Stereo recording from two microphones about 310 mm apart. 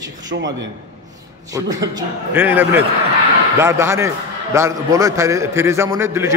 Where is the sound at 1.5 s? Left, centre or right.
Centre.